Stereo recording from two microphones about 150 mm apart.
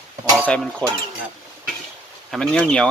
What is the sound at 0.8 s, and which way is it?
Speech, 5° left (ahead or behind).